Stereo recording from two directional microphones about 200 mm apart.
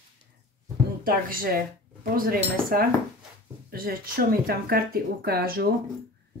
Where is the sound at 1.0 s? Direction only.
45° right (ahead or behind).